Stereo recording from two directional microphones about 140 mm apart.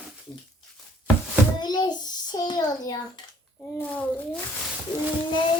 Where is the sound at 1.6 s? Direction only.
30° left (ahead or behind).